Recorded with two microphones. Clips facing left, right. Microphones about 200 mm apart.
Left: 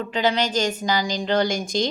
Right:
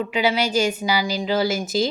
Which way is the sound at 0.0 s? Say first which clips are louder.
Right 1 dB; 10° right (ahead or behind).